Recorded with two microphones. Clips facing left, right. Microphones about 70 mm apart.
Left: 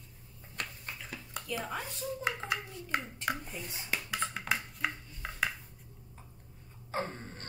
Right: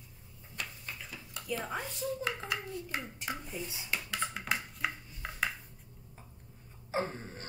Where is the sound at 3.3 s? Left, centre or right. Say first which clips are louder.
Left 6 dB; left.